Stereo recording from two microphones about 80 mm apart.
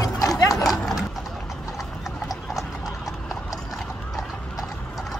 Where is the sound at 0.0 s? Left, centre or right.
Left.